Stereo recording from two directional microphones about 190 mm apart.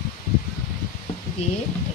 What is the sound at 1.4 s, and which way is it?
Speech, 35° left (ahead or behind).